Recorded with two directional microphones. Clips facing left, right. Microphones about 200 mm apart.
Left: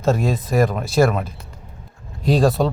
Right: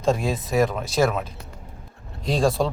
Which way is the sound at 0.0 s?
Centre (ahead or behind).